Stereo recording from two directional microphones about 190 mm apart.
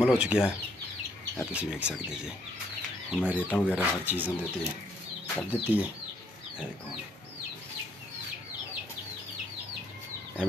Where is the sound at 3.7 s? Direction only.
10° right (ahead or behind).